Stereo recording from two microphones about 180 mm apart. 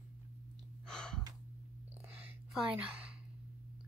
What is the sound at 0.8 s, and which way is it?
Gasp, 5° left (ahead or behind).